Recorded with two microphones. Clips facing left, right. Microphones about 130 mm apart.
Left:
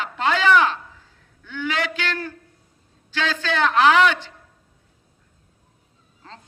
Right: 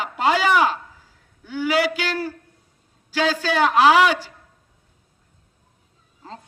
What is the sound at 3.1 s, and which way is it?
Speech, 40° right (ahead or behind).